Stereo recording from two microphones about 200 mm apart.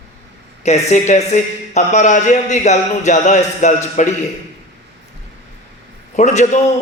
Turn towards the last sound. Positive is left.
turn(degrees=35)  # may be behind; listen again after turning